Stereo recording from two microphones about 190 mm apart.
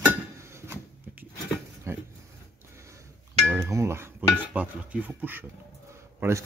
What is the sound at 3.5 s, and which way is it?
Chink, 15° right (ahead or behind).